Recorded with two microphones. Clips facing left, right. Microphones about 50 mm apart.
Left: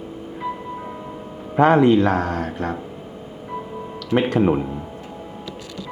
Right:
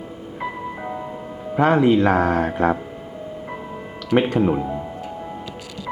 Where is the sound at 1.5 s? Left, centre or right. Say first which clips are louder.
Left 2 dB; centre.